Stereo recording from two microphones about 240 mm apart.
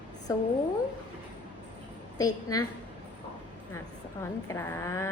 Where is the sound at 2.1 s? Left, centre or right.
Centre.